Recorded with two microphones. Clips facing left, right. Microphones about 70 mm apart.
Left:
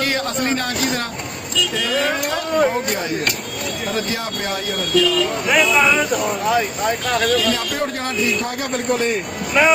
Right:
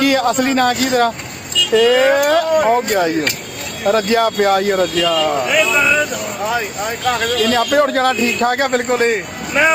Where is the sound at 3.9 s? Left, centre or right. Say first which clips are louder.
Right 13 dB; right.